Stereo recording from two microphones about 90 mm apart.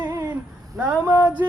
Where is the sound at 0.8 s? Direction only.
35° right (ahead or behind).